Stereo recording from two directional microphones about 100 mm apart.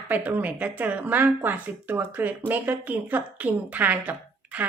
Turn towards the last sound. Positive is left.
turn(degrees=-15)  # may be behind; listen again after turning